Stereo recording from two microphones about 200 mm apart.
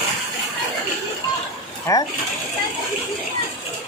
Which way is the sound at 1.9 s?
15° left (ahead or behind).